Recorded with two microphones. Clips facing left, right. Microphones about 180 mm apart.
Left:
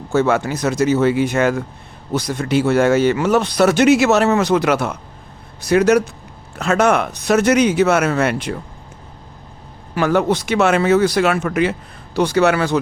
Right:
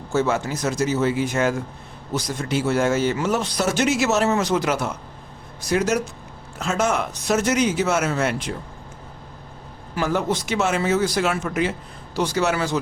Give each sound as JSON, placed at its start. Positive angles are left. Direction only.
{"t": 0.1, "sound": "speech", "side_deg": 65}
{"t": 9.9, "sound": "speech", "side_deg": 65}